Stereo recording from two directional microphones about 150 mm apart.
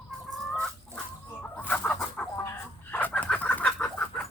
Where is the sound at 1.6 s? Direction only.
10° left (ahead or behind).